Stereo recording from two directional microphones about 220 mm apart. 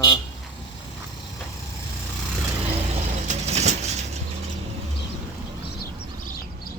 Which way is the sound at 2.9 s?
30° right (ahead or behind).